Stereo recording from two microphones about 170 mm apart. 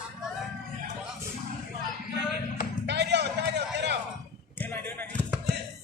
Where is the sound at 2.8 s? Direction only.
85° right.